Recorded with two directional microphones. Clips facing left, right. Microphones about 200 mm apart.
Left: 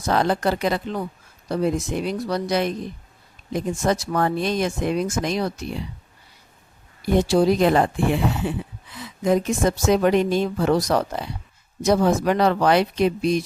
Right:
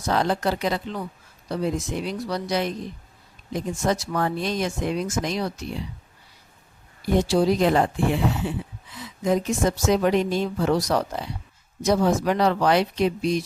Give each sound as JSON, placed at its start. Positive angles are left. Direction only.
{"t": 0.1, "sound": "speech", "side_deg": 55}
{"t": 7.3, "sound": "speech", "side_deg": 55}